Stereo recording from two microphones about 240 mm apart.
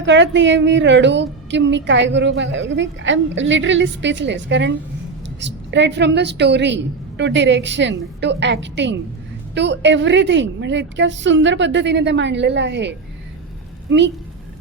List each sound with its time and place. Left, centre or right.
0.0 s a woman's voice: right